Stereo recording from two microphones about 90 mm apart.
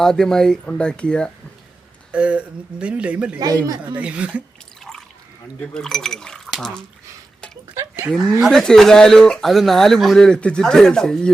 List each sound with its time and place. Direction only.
0.0 s speech: 5° left (ahead or behind)
2.1 s speech: 15° right (ahead or behind)
3.3 s speech: 40° right (ahead or behind)
3.9 s speech: 15° right (ahead or behind)
4.8 s a sound: 5° left (ahead or behind)
5.7 s speech: 5° left (ahead or behind)
8.0 s speech: 15° right (ahead or behind)
8.4 s speech: 5° left (ahead or behind)